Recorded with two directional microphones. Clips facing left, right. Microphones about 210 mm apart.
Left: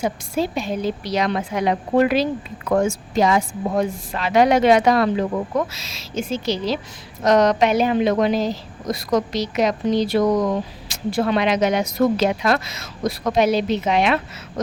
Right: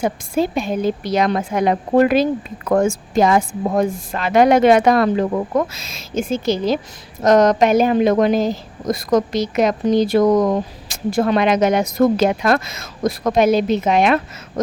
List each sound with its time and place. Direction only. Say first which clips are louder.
0.0 s a woman's voice: right 3 dB; 50° right (ahead or behind)